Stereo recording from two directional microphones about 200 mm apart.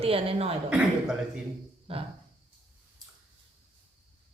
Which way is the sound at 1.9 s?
25° right (ahead or behind).